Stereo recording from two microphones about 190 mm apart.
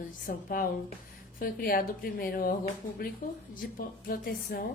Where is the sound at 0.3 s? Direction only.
45° left (ahead or behind).